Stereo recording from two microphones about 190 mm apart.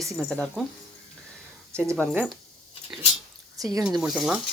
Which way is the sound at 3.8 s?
5° right (ahead or behind).